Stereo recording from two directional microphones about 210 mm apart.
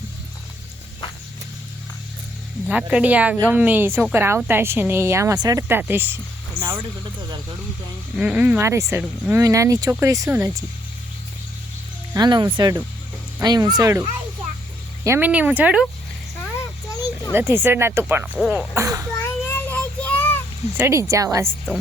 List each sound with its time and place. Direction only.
2.6 s a woman's voice: 5° right (ahead or behind)
8.2 s a woman's voice: 5° right (ahead or behind)
12.1 s a woman's voice: 20° right (ahead or behind); by 15.9 s 5° right (ahead or behind)
17.3 s a woman's voice: 10° right (ahead or behind)
18.3 s a woman's voice: centre (ahead or behind)
19.2 s child singing: 10° left (ahead or behind)
20.7 s a woman's voice: 10° right (ahead or behind)